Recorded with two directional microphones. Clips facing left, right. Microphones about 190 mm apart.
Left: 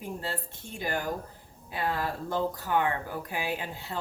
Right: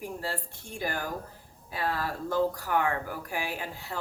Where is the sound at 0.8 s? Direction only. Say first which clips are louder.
Left 2 dB; 20° left (ahead or behind).